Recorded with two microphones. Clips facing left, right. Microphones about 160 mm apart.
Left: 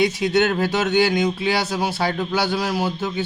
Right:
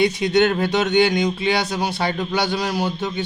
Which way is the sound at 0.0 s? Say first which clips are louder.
Right 1 dB; centre (ahead or behind).